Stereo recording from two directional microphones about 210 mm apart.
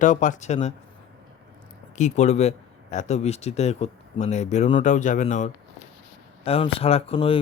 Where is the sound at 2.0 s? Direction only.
35° left (ahead or behind).